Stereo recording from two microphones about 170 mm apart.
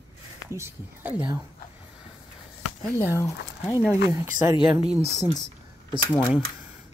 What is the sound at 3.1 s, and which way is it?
Speech, 20° left (ahead or behind).